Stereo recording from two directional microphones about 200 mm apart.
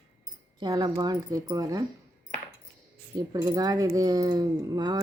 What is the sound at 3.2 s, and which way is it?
Speech, 20° right (ahead or behind).